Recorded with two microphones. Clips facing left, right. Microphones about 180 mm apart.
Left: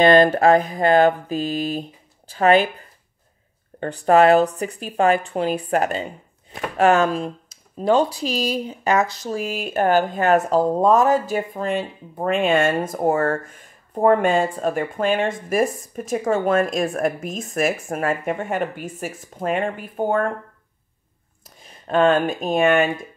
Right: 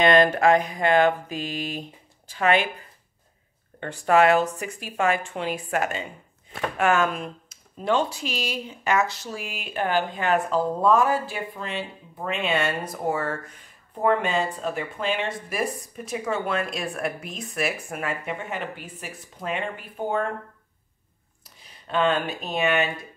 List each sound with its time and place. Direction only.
0.0 s mantra: 30° left (ahead or behind)
3.8 s mantra: 35° left (ahead or behind)
9.3 s speech: 40° left (ahead or behind)
21.5 s speech: 50° left (ahead or behind)